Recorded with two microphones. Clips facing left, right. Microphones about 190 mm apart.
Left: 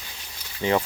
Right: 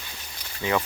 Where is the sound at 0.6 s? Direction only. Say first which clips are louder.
Left 3 dB; 25° left (ahead or behind).